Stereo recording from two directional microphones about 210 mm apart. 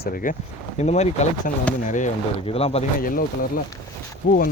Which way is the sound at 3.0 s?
40° left (ahead or behind).